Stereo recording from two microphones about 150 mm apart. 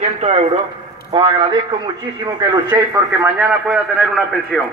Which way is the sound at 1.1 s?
35° right (ahead or behind).